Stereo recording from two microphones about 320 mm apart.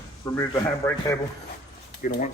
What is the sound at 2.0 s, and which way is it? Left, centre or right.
Speech, left.